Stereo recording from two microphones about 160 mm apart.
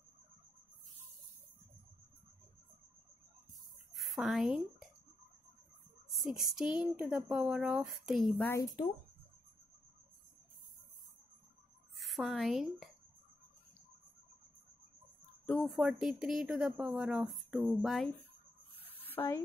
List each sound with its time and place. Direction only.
3.9 s a sound: centre (ahead or behind)
6.5 s speech: 5° right (ahead or behind)
8.5 s speech: 20° left (ahead or behind)
12.0 s speech: centre (ahead or behind)
15.4 s speech: centre (ahead or behind)
18.8 s a sound: 10° left (ahead or behind)